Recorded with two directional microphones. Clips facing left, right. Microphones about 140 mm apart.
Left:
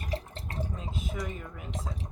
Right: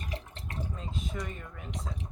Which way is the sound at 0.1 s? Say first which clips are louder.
Left 9 dB; 35° left (ahead or behind).